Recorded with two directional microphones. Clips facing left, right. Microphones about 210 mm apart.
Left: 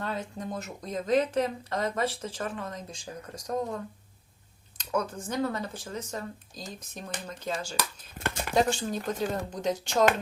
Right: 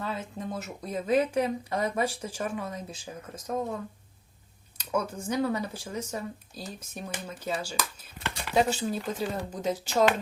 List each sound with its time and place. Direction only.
0.0 s speech: centre (ahead or behind)
4.8 s speech: 10° right (ahead or behind)
8.2 s a sound: 50° left (ahead or behind)
8.5 s speech: 5° right (ahead or behind)